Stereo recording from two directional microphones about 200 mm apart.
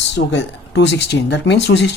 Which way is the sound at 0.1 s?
60° left (ahead or behind).